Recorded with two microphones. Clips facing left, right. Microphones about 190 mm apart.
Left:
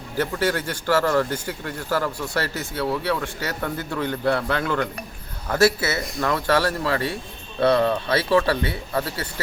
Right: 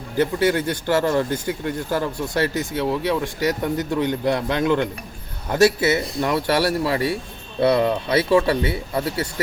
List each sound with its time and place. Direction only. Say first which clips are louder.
0.2 s speech: right 4 dB; 20° right (ahead or behind)